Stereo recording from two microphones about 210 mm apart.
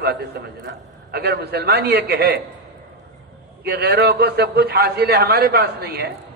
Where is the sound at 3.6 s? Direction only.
50° right (ahead or behind).